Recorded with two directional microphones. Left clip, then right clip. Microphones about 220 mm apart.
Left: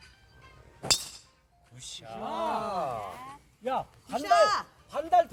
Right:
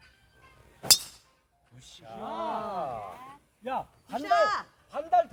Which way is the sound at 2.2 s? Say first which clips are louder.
Left 2 dB; 50° left (ahead or behind).